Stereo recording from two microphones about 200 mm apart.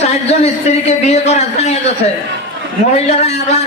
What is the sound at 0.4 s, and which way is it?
Speech, 30° left (ahead or behind).